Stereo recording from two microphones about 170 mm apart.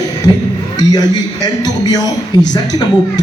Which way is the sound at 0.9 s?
25° left (ahead or behind).